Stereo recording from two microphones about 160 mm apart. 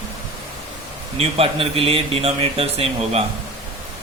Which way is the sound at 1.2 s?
35° right (ahead or behind).